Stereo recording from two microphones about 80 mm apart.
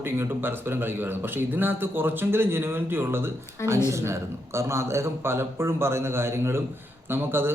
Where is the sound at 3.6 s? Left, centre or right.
Left.